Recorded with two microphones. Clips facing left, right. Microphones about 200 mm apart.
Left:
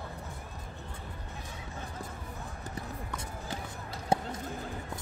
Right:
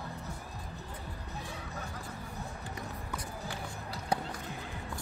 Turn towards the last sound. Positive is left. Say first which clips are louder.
# left 4 dB
turn(degrees=25)  # may be behind; listen again after turning